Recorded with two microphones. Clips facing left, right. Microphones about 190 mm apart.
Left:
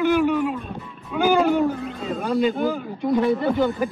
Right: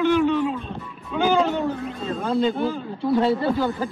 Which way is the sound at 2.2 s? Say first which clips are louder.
Left 1 dB; 15° left (ahead or behind).